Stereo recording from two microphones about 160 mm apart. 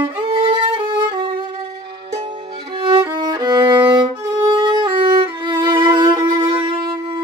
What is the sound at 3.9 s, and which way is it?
Violin, 30° right (ahead or behind).